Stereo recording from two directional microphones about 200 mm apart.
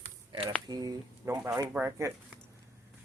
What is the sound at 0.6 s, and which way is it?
Speech, 20° right (ahead or behind).